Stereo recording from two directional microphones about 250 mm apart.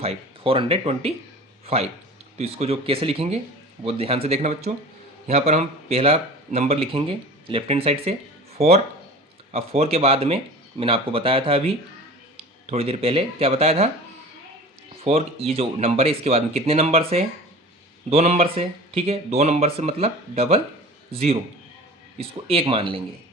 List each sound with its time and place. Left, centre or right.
0.0 s speech: right
12.7 s speech: right
15.0 s a man's voice: right